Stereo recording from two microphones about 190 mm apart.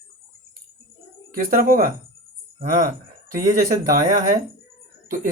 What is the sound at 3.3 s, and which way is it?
Speech, 45° right (ahead or behind).